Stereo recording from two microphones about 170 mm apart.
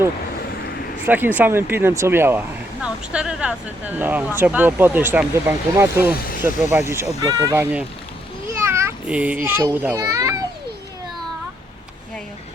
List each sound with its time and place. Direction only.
1.0 s speech: 10° right (ahead or behind)
6.1 s speech: 60° left (ahead or behind)
6.7 s a child's voice: 15° right (ahead or behind)